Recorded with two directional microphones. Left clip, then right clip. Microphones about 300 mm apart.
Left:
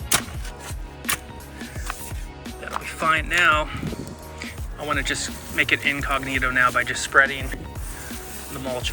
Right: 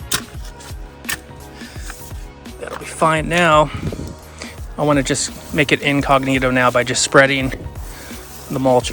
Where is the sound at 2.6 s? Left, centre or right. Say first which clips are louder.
Right 5 dB; centre.